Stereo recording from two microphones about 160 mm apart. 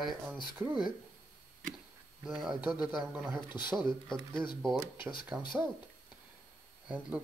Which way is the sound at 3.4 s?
30° left (ahead or behind).